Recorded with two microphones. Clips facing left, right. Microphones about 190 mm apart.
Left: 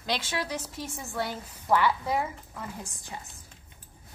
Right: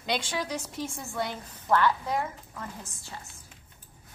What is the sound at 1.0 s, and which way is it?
A woman's voice, 5° left (ahead or behind).